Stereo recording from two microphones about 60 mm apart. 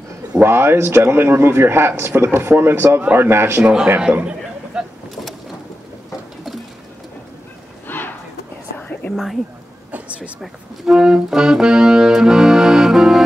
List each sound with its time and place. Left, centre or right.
0.4 s a man's voice: right
3.6 s a man's voice: centre
4.7 s vehicle: centre
7.9 s a sound: left
8.7 s whispering: left
9.1 s speech: centre
9.8 s a sound: right
10.4 s speech: centre